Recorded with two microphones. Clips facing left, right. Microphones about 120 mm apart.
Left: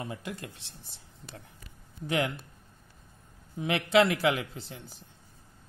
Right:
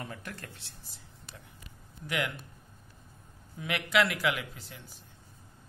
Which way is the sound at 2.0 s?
35° left (ahead or behind).